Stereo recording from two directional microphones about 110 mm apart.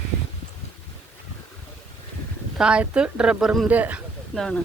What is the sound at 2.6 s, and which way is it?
Speech, 10° right (ahead or behind).